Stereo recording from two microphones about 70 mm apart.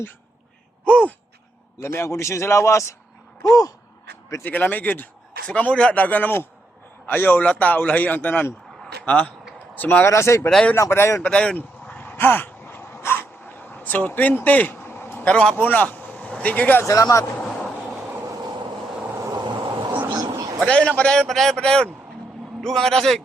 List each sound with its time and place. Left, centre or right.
0.9 s gasp: left
1.8 s a man's voice: left
4.4 s speech: left
10.1 s a man's voice: left
11.2 s a sound: centre; by 15.3 s left
15.5 s speech: left
16.8 s a man's voice: left
19.3 s vehicle: right
20.1 s a sound: right
20.7 s a man's voice: centre